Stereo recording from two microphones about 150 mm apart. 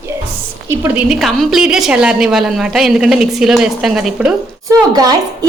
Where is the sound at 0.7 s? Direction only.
15° right (ahead or behind).